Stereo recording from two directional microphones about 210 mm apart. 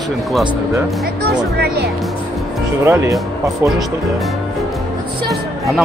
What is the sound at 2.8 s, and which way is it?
Speech, 10° right (ahead or behind).